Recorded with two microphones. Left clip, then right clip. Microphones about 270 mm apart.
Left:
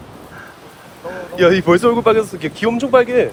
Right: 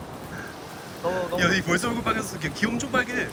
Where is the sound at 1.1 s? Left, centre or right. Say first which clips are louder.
Left 10 dB; centre.